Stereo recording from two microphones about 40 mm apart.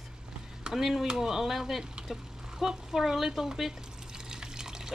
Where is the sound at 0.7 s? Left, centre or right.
Centre.